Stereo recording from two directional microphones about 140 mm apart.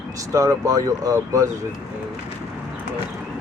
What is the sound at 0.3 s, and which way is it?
Speech, 25° right (ahead or behind).